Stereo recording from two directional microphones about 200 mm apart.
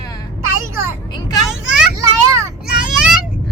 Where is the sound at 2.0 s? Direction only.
15° right (ahead or behind).